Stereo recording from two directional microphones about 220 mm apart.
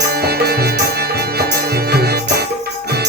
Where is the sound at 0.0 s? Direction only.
45° right (ahead or behind).